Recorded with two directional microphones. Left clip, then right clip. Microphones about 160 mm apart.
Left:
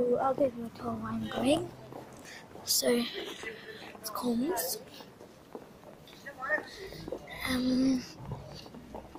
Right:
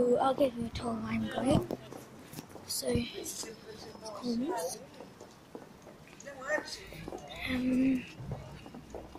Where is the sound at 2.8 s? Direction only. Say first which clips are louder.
Left 4 dB; 5° left (ahead or behind).